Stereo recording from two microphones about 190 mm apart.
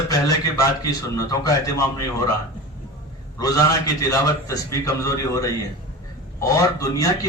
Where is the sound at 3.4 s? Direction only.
20° left (ahead or behind).